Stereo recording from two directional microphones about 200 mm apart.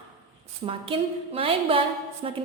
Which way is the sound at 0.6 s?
25° right (ahead or behind).